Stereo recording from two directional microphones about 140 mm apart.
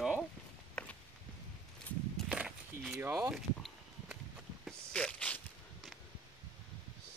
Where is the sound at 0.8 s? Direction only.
5° left (ahead or behind).